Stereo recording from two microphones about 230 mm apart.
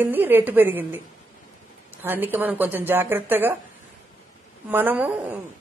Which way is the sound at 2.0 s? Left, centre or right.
Centre.